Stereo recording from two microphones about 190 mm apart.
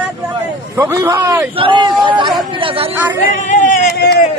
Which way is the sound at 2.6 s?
30° right (ahead or behind).